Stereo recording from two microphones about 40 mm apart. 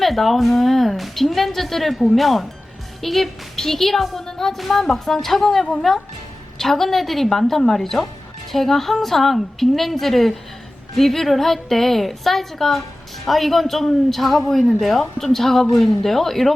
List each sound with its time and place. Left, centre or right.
0.0 s a woman's voice: centre
4.3 s music: centre
4.5 s a woman's voice: centre